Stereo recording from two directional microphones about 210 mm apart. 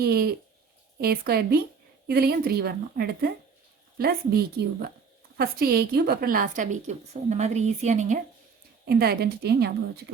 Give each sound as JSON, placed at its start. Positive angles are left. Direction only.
{"t": 0.0, "sound": "a woman's voice", "side_deg": -45}
{"t": 8.8, "sound": "a woman's voice", "side_deg": -45}